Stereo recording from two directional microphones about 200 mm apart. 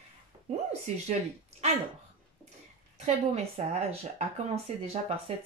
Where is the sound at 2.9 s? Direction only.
30° right (ahead or behind).